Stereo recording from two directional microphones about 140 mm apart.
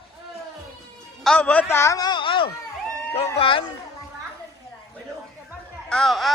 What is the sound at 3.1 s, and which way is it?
Dog, 40° left (ahead or behind).